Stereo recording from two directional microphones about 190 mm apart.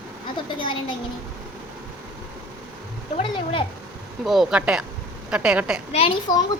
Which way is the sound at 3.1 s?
30° left (ahead or behind).